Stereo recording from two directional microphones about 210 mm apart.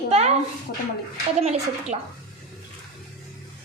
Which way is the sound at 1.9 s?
30° right (ahead or behind).